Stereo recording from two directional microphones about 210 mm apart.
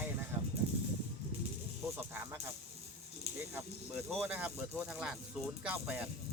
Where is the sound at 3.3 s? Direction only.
30° right (ahead or behind).